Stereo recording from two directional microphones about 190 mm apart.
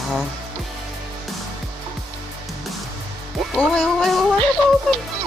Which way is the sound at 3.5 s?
Centre (ahead or behind).